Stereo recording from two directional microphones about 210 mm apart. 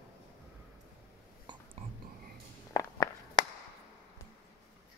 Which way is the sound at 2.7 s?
15° left (ahead or behind).